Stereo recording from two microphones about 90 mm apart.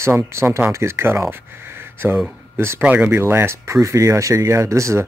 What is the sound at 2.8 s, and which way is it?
Speech, 20° right (ahead or behind).